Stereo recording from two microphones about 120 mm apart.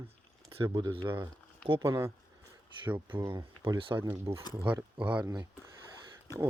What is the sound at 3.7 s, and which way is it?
Speech, 45° right (ahead or behind).